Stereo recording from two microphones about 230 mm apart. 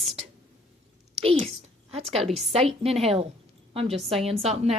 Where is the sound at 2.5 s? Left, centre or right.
Right.